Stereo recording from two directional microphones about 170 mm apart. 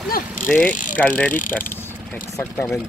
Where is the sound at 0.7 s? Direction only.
50° left (ahead or behind).